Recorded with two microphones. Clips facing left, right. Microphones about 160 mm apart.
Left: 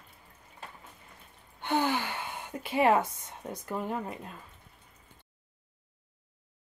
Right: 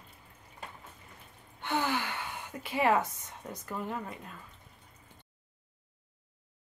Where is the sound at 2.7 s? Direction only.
25° left (ahead or behind).